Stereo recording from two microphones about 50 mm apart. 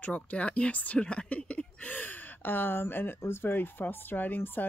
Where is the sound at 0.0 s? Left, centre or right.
Left.